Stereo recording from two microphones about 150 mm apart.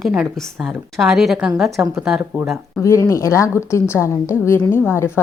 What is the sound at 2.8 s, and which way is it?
A woman's voice, 20° left (ahead or behind).